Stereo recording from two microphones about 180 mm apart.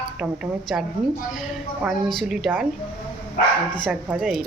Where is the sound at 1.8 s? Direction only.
Centre (ahead or behind).